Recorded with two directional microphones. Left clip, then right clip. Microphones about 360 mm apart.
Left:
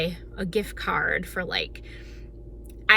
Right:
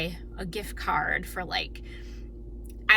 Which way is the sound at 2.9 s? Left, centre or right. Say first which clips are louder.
Left 2 dB; centre.